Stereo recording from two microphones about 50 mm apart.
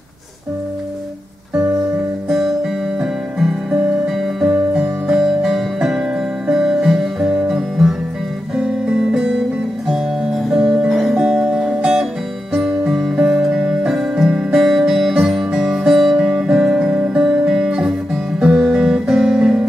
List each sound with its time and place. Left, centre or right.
2.2 s music: centre
10.5 s music: centre